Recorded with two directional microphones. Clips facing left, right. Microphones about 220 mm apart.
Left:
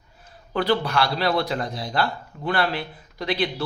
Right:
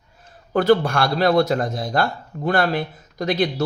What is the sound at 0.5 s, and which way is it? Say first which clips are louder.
Speech: right 6 dB; 50° right (ahead or behind).